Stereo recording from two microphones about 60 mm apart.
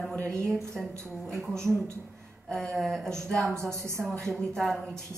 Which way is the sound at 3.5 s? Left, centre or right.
Right.